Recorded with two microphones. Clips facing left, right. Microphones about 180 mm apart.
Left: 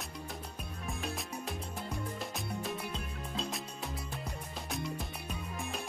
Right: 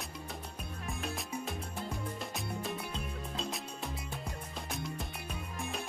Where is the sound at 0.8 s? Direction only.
Centre (ahead or behind).